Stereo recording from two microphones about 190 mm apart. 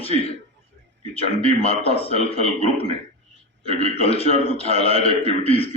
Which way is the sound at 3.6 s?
35° left (ahead or behind).